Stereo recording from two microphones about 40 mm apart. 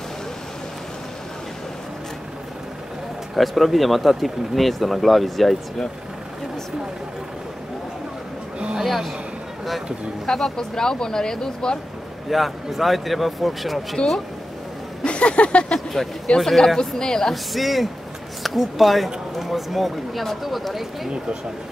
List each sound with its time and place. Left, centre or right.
3.3 s speech: centre
8.7 s speech: centre
10.2 s speech: centre
12.3 s speech: centre
14.0 s speech: left
15.7 s speech: centre
17.3 s speech: centre